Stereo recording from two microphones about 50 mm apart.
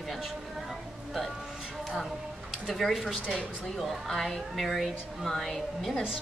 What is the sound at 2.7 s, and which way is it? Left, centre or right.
Speech, centre.